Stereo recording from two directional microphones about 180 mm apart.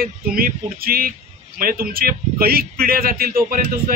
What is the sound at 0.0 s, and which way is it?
Speech, 55° right (ahead or behind).